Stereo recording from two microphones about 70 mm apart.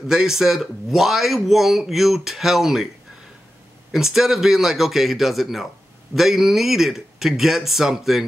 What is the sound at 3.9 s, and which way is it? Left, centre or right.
A man's voice, centre.